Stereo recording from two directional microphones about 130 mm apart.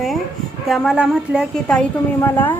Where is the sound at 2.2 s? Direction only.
15° left (ahead or behind).